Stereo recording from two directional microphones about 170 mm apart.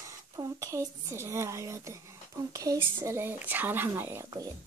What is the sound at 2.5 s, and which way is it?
Speech, 20° right (ahead or behind).